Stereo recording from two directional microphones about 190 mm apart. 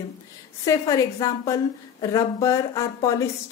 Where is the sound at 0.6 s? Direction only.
15° left (ahead or behind).